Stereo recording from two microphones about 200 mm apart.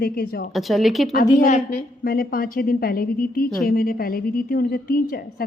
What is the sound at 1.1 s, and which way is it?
Speech, 40° left (ahead or behind).